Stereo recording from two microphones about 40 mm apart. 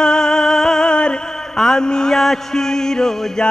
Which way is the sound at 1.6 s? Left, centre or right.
Centre.